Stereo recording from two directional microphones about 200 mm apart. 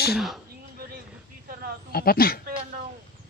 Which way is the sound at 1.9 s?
50° left (ahead or behind).